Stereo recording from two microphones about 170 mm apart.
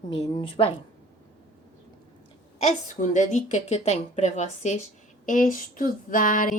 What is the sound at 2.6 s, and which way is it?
A woman's voice, 45° left (ahead or behind).